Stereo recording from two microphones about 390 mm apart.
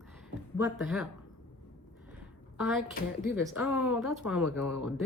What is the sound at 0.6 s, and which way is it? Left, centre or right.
Speech, centre.